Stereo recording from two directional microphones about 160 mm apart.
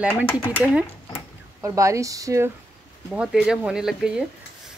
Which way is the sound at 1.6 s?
20° right (ahead or behind).